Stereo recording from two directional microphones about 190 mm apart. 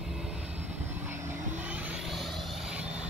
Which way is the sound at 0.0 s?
5° right (ahead or behind).